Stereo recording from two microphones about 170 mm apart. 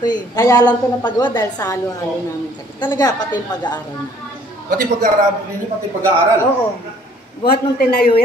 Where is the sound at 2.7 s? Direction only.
20° left (ahead or behind).